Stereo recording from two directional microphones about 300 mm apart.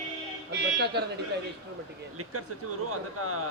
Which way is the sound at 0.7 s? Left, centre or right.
Right.